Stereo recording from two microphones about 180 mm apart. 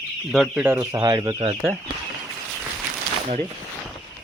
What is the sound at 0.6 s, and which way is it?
Speech, 15° right (ahead or behind).